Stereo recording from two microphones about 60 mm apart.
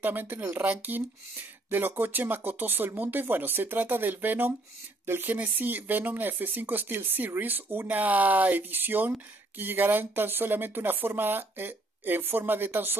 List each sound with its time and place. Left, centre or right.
0.0 s speech: right
5.3 s speech: right